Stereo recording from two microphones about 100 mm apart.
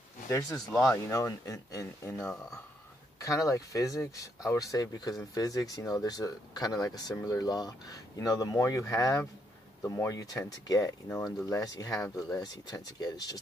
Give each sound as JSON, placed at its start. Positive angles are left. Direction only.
{"t": 0.3, "sound": "speech", "side_deg": 30}
{"t": 0.6, "sound": "speech", "side_deg": 5}
{"t": 0.9, "sound": "speech", "side_deg": 30}